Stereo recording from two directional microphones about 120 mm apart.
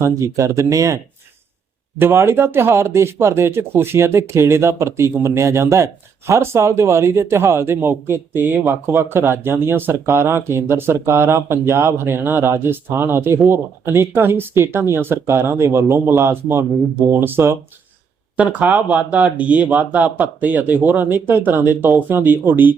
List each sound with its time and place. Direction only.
0.0 s speech: 25° right (ahead or behind)
2.0 s speech: 20° right (ahead or behind)